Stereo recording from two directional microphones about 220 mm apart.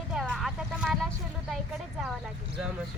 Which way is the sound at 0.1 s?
Centre (ahead or behind).